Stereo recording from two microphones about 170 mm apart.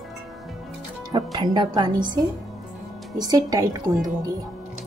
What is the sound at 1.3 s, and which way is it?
A woman's voice, 25° right (ahead or behind).